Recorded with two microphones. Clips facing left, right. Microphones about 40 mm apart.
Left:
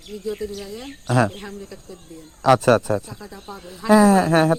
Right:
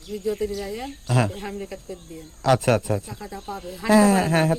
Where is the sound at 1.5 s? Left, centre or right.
Right.